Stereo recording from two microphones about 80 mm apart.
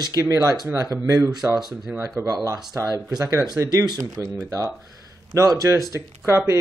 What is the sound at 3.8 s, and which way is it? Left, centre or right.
Speech, right.